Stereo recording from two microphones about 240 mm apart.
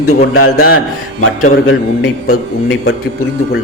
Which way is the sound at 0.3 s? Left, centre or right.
Left.